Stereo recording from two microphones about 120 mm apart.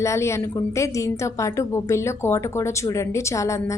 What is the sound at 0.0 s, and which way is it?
Speech, 25° left (ahead or behind).